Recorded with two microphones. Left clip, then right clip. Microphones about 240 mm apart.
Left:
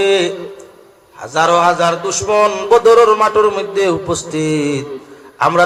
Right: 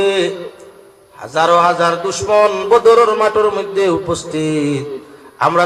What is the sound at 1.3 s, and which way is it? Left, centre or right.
A man's voice, left.